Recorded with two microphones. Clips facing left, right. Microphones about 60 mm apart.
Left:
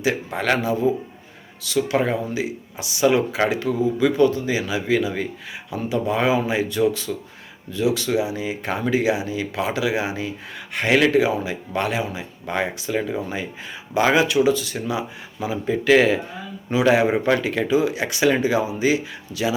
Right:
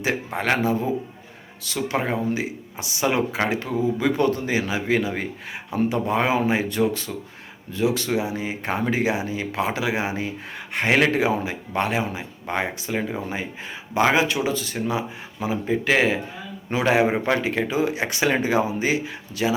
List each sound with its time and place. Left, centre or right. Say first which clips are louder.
0.3 s speech: right 1 dB; right
4.0 s speech: left 6 dB; right